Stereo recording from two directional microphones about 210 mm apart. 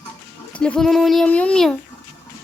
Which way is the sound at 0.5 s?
5° left (ahead or behind).